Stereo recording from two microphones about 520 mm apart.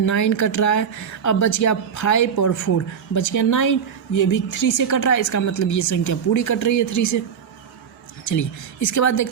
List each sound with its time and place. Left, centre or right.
0.0 s a woman's voice: left
8.2 s a woman's voice: left